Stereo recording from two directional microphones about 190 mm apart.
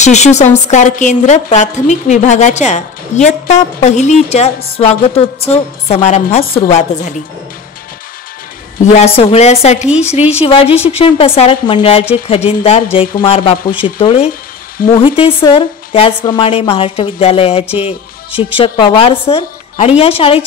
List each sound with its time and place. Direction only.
0.0 s a woman's voice: 35° left (ahead or behind)
8.9 s a woman's voice: 30° left (ahead or behind)